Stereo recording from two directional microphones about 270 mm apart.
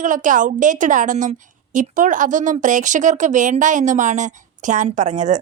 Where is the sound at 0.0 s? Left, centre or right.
Right.